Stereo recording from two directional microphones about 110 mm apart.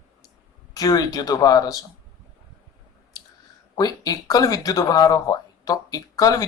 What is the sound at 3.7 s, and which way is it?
Speech, 35° left (ahead or behind).